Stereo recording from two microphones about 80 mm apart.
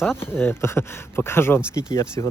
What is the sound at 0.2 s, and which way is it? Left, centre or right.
Speech, left.